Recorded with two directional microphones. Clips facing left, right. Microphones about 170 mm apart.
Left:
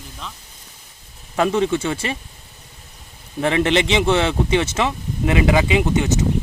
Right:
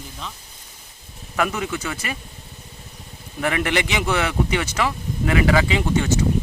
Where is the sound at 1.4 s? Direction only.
25° left (ahead or behind).